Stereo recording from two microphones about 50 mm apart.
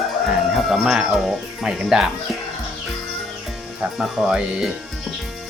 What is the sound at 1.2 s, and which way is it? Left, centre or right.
Speech, centre.